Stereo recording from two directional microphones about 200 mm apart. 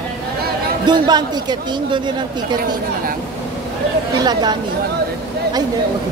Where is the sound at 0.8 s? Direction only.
20° right (ahead or behind).